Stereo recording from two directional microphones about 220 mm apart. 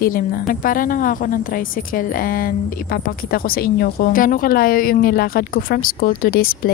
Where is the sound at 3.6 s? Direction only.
40° left (ahead or behind).